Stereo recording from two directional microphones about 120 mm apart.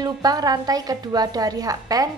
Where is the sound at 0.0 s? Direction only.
30° right (ahead or behind).